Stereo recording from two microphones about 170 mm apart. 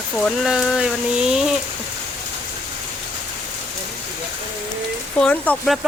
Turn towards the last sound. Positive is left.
turn(degrees=0)  # may be behind; listen again after turning